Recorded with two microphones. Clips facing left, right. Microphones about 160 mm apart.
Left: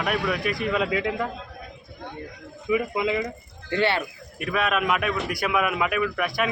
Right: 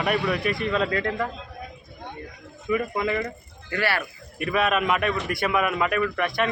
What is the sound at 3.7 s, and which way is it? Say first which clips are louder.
Speech: left 3 dB; 25° left (ahead or behind).